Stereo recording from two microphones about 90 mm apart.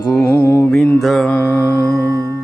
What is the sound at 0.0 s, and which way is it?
Mantra, 35° left (ahead or behind).